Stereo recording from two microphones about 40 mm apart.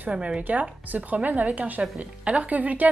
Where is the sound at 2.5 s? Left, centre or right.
Right.